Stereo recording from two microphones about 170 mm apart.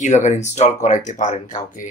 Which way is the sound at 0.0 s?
45° left (ahead or behind).